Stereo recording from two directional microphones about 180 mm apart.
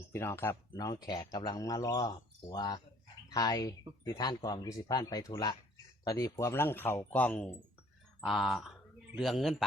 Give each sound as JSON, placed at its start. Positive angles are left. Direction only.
{"t": 0.1, "sound": "speech", "side_deg": 15}